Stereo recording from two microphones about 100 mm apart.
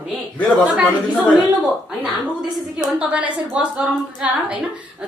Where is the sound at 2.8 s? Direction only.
10° right (ahead or behind).